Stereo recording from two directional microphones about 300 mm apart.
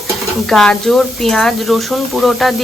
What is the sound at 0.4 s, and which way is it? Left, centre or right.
A woman's voice, centre.